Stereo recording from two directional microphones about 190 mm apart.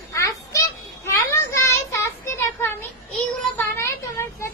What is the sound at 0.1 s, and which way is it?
Children playing, 15° left (ahead or behind).